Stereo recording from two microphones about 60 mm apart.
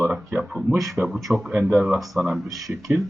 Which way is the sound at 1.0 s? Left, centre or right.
Right.